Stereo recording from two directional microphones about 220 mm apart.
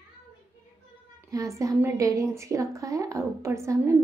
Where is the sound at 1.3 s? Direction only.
15° right (ahead or behind).